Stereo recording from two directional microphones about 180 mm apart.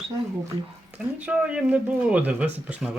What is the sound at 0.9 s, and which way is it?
Speech, 10° right (ahead or behind).